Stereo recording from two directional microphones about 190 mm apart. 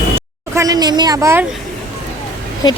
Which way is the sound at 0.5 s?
20° right (ahead or behind).